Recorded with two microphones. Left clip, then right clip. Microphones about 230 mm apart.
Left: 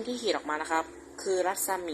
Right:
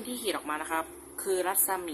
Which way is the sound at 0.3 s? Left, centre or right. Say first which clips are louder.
Left 2 dB; centre.